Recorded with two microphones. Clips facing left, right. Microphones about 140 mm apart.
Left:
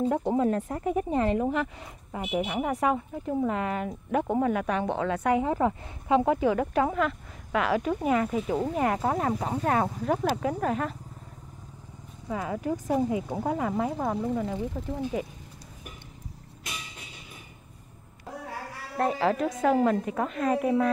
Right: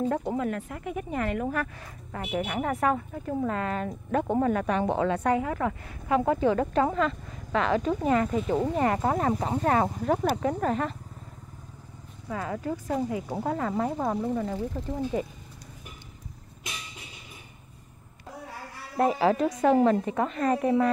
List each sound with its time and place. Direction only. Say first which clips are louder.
0.2 s speech: left 4 dB; 30° left (ahead or behind); by 5.3 s centre (ahead or behind)
5.3 s speech: left 2 dB; 20° left (ahead or behind); by 11.0 s 5° left (ahead or behind)
12.3 s speech: left 1 dB; 10° left (ahead or behind)
18.9 s speech: right 2 dB; 5° right (ahead or behind)